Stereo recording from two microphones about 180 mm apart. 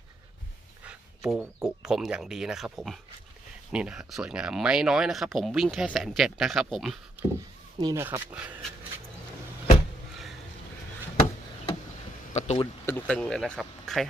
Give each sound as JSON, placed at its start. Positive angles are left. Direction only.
{"t": 0.9, "sound": "speech", "side_deg": -5}
{"t": 7.8, "sound": "speech", "side_deg": -20}
{"t": 8.0, "sound": "speech", "side_deg": -10}
{"t": 12.3, "sound": "speech", "side_deg": 40}
{"t": 12.8, "sound": "speech", "side_deg": 10}